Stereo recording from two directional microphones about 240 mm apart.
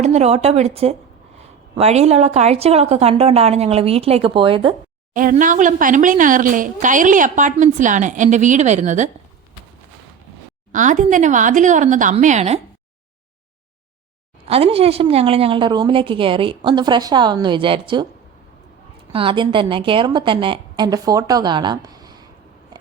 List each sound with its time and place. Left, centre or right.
0.0 s a woman's voice: right
5.1 s a woman's voice: right
10.7 s a woman's voice: right
14.4 s a woman's voice: right
19.1 s a woman's voice: right